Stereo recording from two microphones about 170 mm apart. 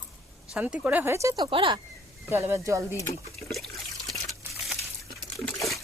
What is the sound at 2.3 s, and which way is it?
Speech, 15° right (ahead or behind).